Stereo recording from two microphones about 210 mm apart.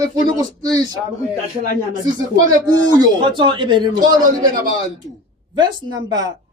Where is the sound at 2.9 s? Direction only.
25° right (ahead or behind).